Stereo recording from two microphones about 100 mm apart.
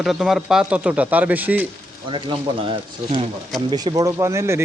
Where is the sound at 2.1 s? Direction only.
55° right (ahead or behind).